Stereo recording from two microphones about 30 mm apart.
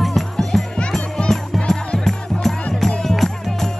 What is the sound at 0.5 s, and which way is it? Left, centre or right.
Music, centre.